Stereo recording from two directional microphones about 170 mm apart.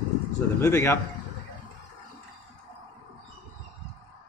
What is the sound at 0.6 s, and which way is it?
Speech, 15° left (ahead or behind).